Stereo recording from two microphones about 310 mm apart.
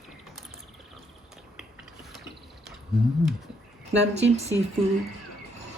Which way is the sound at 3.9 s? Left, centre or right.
Right.